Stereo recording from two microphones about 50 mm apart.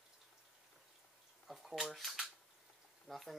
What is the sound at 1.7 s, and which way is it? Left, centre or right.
Speech, centre.